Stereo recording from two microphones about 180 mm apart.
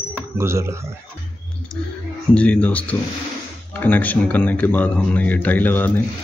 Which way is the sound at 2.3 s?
5° left (ahead or behind).